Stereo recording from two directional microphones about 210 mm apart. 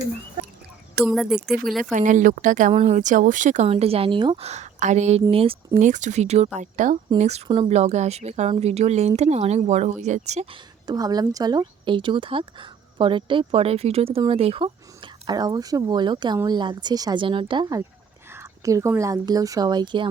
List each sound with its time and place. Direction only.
1.0 s speech: centre (ahead or behind)
1.8 s a woman's voice: 35° right (ahead or behind); by 20.1 s 20° right (ahead or behind)